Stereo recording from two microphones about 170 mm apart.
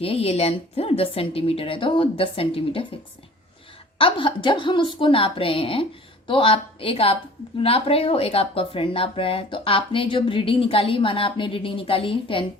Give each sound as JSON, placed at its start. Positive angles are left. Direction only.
{"t": 0.0, "sound": "speech", "side_deg": 35}
{"t": 3.9, "sound": "speech", "side_deg": 30}